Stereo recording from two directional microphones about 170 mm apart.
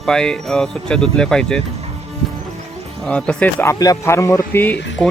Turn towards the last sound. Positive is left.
turn(degrees=10)  # may be behind; listen again after turning